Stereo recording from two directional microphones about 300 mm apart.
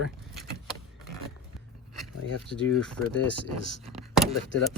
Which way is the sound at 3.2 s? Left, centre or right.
Left.